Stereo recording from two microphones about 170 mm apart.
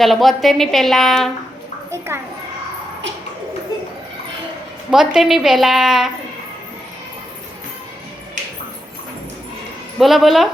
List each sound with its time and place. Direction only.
0.0 s a woman's voice: centre (ahead or behind)
1.9 s a woman's voice: 15° right (ahead or behind)
4.9 s a woman's voice: 5° right (ahead or behind)
10.0 s a woman's voice: centre (ahead or behind)